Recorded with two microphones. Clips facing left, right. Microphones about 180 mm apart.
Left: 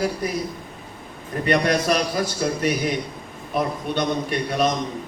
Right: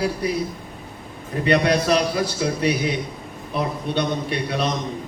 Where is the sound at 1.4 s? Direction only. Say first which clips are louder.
Right 1 dB; 50° left (ahead or behind).